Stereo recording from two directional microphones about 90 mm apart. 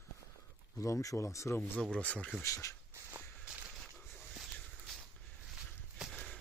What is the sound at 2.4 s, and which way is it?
Speech, 35° left (ahead or behind).